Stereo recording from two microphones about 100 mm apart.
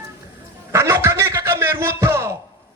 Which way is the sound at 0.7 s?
25° right (ahead or behind).